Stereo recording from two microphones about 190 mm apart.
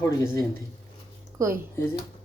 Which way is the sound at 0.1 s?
20° left (ahead or behind).